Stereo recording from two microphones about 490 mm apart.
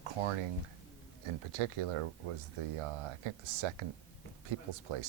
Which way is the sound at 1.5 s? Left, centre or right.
Right.